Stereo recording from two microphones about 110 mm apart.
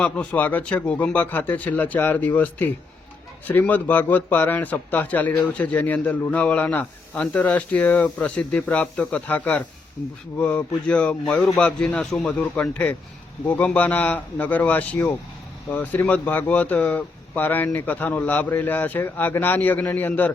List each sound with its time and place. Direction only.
0.0 s a man's voice: 10° left (ahead or behind)